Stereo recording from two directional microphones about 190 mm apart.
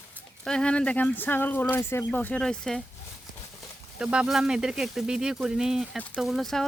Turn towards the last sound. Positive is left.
turn(degrees=0)  # may be behind; listen again after turning